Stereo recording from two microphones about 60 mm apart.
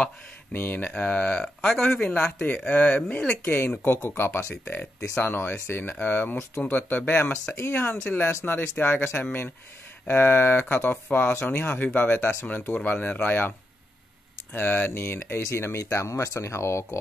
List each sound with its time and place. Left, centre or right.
0.5 s speech: left; by 2.0 s centre
2.4 s speech: left
3.8 s speech: left
14.5 s speech: left